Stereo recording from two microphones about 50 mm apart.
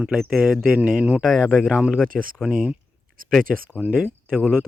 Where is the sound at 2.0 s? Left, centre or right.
Centre.